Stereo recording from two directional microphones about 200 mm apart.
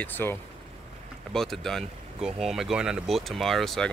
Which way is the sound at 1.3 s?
Centre (ahead or behind).